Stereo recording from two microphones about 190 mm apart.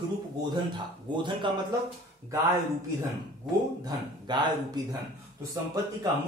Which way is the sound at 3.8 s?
25° right (ahead or behind).